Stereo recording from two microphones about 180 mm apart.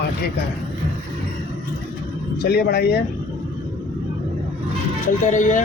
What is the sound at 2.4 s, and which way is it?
Speech, 60° left (ahead or behind).